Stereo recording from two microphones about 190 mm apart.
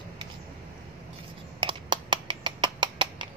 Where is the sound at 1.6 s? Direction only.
25° right (ahead or behind).